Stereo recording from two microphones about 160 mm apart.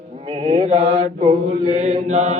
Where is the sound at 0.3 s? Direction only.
35° right (ahead or behind).